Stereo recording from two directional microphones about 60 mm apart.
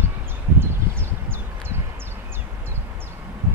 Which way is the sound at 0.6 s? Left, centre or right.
Right.